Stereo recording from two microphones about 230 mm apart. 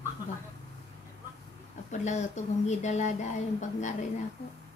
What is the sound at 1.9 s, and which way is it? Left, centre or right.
Speech, left.